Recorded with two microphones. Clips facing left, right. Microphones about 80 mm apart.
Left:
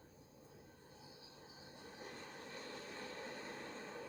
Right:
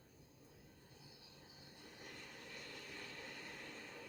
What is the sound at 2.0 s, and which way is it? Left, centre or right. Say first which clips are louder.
Vehicle: left 4 dB; left.